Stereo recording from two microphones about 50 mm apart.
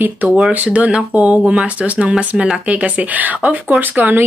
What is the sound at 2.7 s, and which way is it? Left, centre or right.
Speech, right.